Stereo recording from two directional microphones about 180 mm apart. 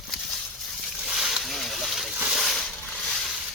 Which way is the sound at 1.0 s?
5° right (ahead or behind).